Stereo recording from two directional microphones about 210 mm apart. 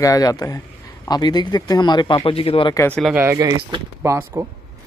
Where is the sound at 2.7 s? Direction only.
10° left (ahead or behind).